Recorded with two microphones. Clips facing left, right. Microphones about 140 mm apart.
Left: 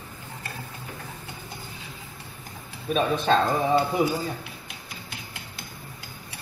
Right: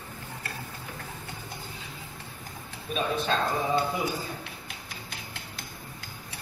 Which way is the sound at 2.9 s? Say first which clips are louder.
Left 6 dB; 50° left (ahead or behind).